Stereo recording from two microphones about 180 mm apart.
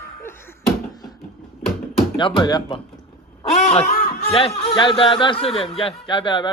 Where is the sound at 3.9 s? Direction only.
60° left (ahead or behind).